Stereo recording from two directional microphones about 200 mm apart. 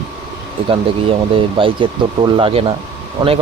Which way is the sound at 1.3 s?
25° right (ahead or behind).